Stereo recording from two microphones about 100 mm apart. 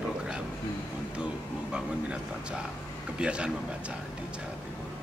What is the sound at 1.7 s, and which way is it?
Speech, 10° right (ahead or behind).